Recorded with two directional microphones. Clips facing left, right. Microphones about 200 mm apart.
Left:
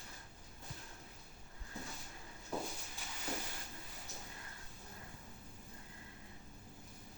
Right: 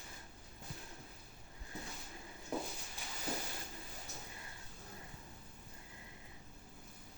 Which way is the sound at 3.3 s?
35° right (ahead or behind).